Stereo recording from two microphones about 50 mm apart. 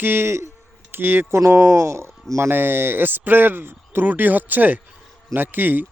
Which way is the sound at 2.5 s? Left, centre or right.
Right.